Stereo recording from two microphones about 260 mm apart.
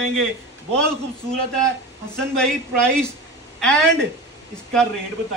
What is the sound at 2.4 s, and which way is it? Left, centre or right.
A man's voice, centre.